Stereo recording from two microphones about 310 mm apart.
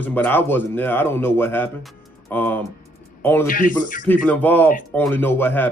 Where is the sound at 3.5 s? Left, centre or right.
Left.